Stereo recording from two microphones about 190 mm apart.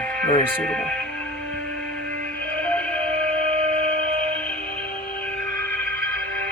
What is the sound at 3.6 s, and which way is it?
Music, 30° right (ahead or behind).